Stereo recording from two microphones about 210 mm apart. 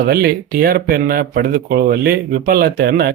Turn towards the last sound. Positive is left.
turn(degrees=-45)  # may be behind; listen again after turning